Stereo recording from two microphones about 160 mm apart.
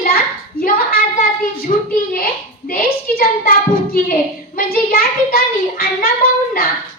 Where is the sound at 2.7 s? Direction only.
60° left (ahead or behind).